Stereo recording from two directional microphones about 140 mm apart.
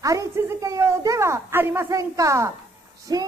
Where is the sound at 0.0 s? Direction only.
25° right (ahead or behind).